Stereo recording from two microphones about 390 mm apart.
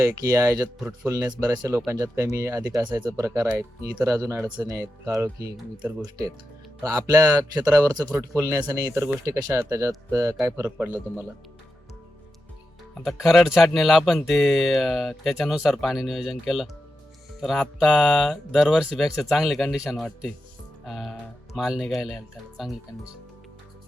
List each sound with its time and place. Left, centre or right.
0.0 s speech: centre
12.9 s speech: centre